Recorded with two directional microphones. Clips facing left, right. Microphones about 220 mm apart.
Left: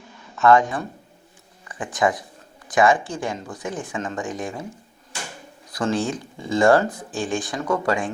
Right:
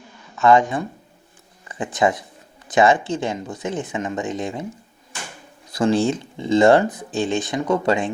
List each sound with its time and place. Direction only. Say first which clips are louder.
0.4 s speech: right 1 dB; 15° right (ahead or behind)
5.7 s speech: right 5 dB; 25° right (ahead or behind)